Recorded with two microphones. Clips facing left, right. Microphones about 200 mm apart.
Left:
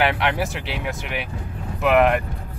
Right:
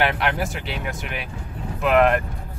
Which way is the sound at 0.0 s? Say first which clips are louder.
Left 1 dB; centre (ahead or behind).